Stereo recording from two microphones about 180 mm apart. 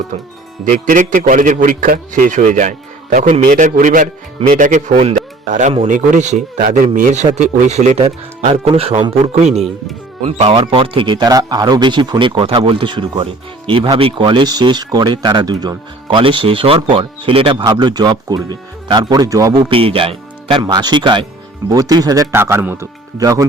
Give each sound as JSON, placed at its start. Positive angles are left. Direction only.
{"t": 0.6, "sound": "speech", "side_deg": -45}